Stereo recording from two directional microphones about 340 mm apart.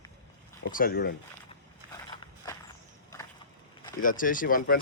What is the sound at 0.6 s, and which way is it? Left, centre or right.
Speech, left.